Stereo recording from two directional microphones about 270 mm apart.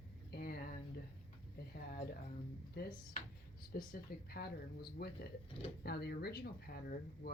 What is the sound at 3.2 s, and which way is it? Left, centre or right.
Speech, left.